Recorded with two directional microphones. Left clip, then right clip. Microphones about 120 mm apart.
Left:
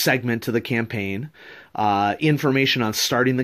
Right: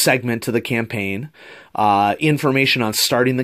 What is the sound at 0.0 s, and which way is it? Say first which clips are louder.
Speech: right 4 dB; 30° right (ahead or behind).